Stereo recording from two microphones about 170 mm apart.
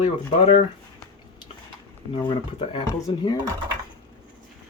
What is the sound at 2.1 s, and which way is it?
Speech, 30° left (ahead or behind).